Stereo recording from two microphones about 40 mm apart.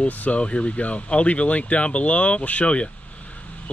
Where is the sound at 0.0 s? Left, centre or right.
Left.